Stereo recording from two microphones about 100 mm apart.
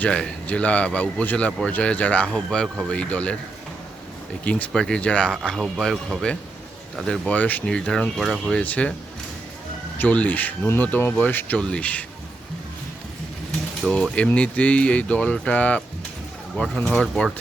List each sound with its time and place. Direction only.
0.0 s a man's voice: 10° left (ahead or behind)
4.4 s a man's voice: 15° left (ahead or behind)
8.6 s a man's voice: 15° left (ahead or behind)
10.0 s a man's voice: 15° left (ahead or behind)
13.9 s a man's voice: 10° left (ahead or behind)